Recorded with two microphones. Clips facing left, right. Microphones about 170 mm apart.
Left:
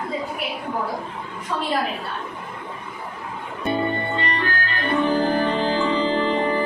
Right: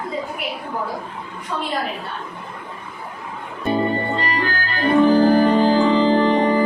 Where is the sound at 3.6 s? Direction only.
35° right (ahead or behind).